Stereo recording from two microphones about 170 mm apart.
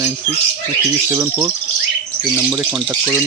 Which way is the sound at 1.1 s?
15° right (ahead or behind).